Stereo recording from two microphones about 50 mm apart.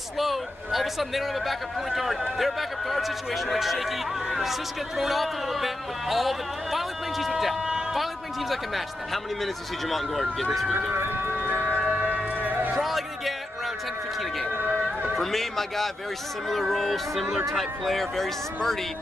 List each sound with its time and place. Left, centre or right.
0.2 s speech: centre
10.9 s speech: right
11.3 s a sound: right
12.7 s music: centre
15.1 s speech: centre